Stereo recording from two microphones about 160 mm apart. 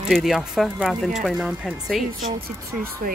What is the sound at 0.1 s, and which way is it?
Speech, centre (ahead or behind).